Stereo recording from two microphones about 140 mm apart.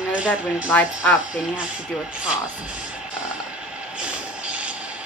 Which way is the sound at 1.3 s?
10° right (ahead or behind).